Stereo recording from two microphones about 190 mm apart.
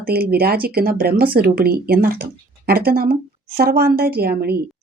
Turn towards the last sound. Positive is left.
turn(degrees=-55)  # may be behind; listen again after turning